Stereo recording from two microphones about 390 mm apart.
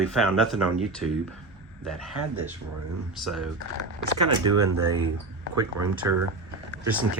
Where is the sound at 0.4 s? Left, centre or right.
Centre.